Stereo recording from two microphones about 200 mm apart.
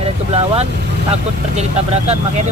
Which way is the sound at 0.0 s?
30° right (ahead or behind).